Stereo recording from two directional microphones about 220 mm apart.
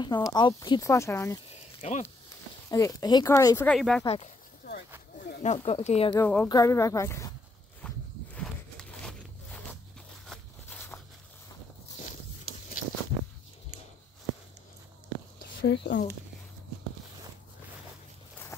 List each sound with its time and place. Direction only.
0.0 s speech: 20° left (ahead or behind)
1.5 s snake: 30° left (ahead or behind)
2.7 s speech: 15° left (ahead or behind)
4.0 s speech: 25° left (ahead or behind)
5.4 s speech: 30° left (ahead or behind)
6.1 s speech: 10° left (ahead or behind)
7.8 s walk: 5° left (ahead or behind)
8.4 s a sound: 5° left (ahead or behind)
15.6 s speech: 55° left (ahead or behind)